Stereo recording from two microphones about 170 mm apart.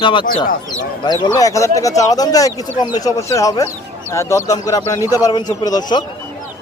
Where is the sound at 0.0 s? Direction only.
30° left (ahead or behind).